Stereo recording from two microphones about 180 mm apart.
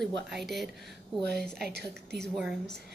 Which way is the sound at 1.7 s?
65° right (ahead or behind).